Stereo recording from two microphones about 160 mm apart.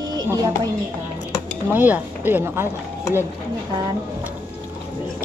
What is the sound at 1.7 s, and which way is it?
Speech, 10° right (ahead or behind).